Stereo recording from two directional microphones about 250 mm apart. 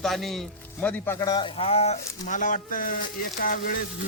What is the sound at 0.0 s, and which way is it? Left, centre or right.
A man's voice, centre.